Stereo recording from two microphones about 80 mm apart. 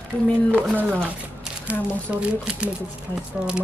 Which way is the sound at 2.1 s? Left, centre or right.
Centre.